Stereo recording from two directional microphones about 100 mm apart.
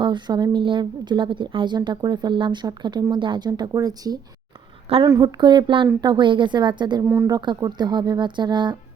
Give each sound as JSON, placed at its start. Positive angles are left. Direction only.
{"t": 0.0, "sound": "a woman's voice", "side_deg": -50}
{"t": 5.4, "sound": "a woman's voice", "side_deg": -50}
{"t": 7.0, "sound": "speech", "side_deg": -25}
{"t": 7.3, "sound": "a woman's voice", "side_deg": -40}